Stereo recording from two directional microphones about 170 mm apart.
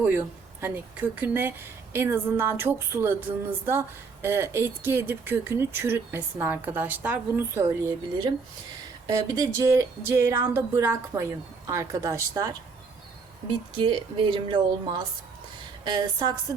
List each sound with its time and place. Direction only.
0.0 s speech: 10° right (ahead or behind)
9.0 s speech: 20° right (ahead or behind)
13.7 s speech: 30° right (ahead or behind)